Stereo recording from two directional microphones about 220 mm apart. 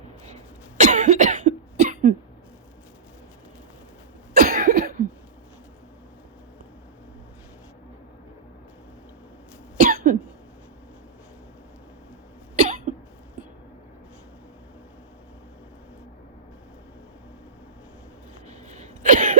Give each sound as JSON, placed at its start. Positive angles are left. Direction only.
{"t": 0.8, "sound": "cough", "side_deg": -35}
{"t": 4.4, "sound": "cough", "side_deg": -40}
{"t": 9.7, "sound": "cough", "side_deg": -40}
{"t": 12.5, "sound": "cough", "side_deg": -35}
{"t": 18.8, "sound": "a sound", "side_deg": -35}